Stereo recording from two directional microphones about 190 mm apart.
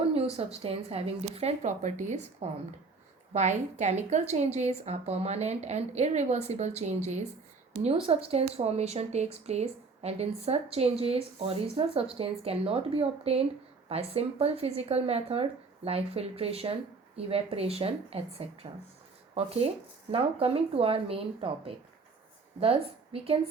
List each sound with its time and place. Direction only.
0.1 s speech: 30° right (ahead or behind)
3.3 s a woman's voice: 40° right (ahead or behind)